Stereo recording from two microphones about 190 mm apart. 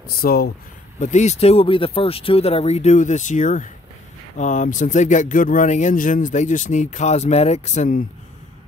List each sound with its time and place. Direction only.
0.2 s speech: 50° left (ahead or behind)
0.9 s speech: 40° left (ahead or behind)